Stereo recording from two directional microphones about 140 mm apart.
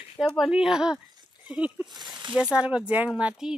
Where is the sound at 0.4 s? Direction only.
5° right (ahead or behind).